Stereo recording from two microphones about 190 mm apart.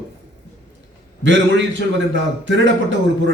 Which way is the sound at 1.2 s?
75° right (ahead or behind).